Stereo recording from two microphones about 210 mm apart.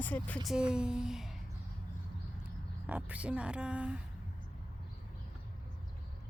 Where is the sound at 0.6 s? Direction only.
5° right (ahead or behind).